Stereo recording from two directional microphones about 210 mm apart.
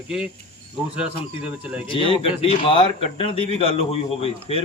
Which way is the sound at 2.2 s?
25° left (ahead or behind).